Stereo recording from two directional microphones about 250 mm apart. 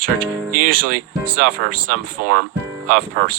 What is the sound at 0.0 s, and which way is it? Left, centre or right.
Speech, right.